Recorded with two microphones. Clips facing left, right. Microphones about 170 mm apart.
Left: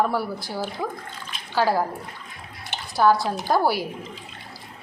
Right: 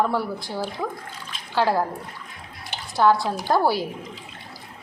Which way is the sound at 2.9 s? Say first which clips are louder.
Even; centre (ahead or behind).